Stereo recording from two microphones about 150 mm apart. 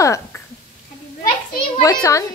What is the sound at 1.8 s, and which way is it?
Speech, 25° left (ahead or behind).